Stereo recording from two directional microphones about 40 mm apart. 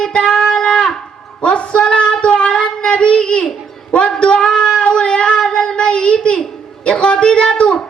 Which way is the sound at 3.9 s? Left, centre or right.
Left.